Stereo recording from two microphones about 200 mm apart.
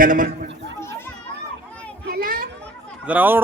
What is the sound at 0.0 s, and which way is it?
Speech, 40° right (ahead or behind).